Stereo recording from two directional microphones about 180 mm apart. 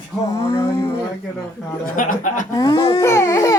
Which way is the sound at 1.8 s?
50° left (ahead or behind).